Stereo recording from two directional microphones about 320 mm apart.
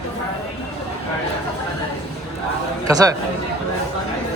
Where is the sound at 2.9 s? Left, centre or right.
Centre.